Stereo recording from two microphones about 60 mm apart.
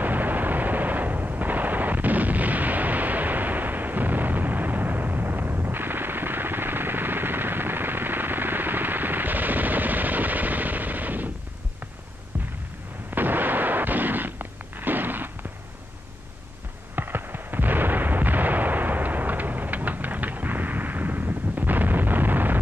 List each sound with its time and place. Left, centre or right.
0.0 s artillery fire: right
13.1 s artillery fire: right
16.9 s artillery fire: right